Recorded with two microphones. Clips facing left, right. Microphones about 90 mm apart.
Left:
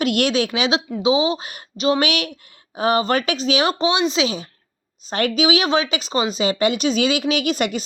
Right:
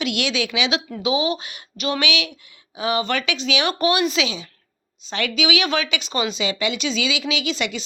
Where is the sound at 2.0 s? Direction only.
50° left (ahead or behind).